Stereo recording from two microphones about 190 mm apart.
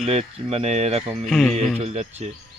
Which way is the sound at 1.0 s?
Centre (ahead or behind).